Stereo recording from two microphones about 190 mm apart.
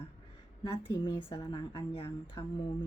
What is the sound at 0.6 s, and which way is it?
A woman's voice, 25° left (ahead or behind).